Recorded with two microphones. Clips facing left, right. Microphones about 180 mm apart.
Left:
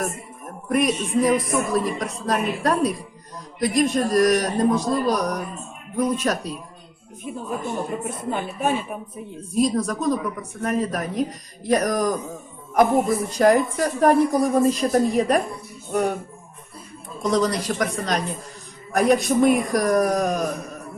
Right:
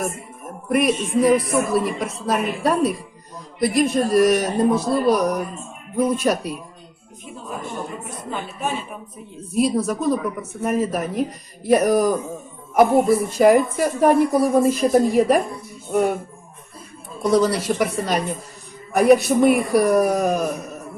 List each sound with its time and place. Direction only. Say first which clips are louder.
0.7 s a man's voice: right 2 dB; 5° right (ahead or behind)
8.3 s speech: left 3 dB; 50° left (ahead or behind)
9.6 s speech: right 1 dB; 5° right (ahead or behind)
17.2 s a man's voice: right 3 dB; 5° right (ahead or behind)